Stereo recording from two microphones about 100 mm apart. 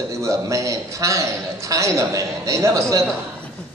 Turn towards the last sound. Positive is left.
turn(degrees=-30)  # may be behind; listen again after turning